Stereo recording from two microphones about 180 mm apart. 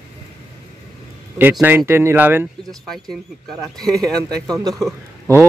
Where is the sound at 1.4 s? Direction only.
10° right (ahead or behind).